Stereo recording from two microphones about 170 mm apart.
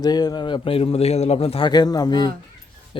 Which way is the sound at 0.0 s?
25° left (ahead or behind).